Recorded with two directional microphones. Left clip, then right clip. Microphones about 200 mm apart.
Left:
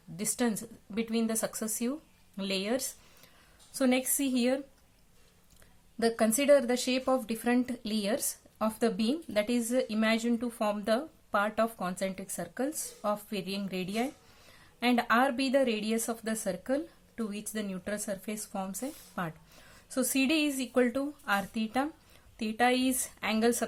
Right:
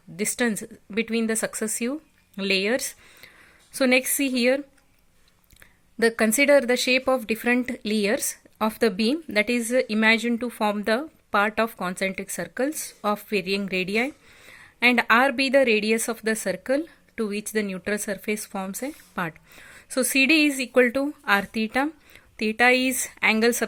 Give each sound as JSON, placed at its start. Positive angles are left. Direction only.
{"t": 0.2, "sound": "speech", "side_deg": -35}
{"t": 6.0, "sound": "speech", "side_deg": -40}